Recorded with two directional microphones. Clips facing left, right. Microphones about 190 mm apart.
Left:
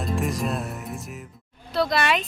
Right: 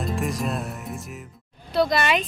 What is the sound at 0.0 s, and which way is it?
Music, centre (ahead or behind).